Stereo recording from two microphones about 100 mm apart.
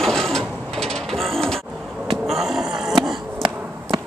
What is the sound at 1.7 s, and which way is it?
Vehicle, 5° right (ahead or behind).